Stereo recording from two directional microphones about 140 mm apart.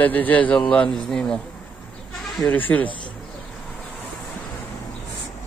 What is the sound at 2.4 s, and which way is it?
Speech, 10° left (ahead or behind).